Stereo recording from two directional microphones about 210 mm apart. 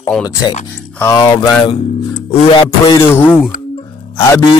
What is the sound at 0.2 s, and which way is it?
Speech, 15° left (ahead or behind).